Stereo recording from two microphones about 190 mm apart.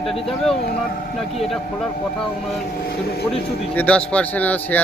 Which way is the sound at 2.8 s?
55° left (ahead or behind).